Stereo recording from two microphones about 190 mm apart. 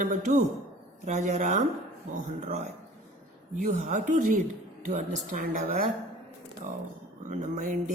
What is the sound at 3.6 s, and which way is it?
A woman's voice, 45° right (ahead or behind).